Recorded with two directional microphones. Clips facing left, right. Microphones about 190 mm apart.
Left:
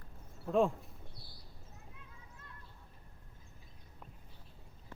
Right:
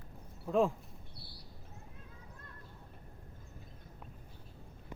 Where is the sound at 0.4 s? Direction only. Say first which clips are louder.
Even; centre (ahead or behind).